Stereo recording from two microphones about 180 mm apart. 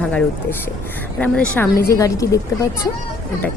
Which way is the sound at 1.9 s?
20° left (ahead or behind).